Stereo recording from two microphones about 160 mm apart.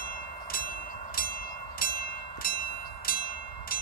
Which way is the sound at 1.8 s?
65° left (ahead or behind).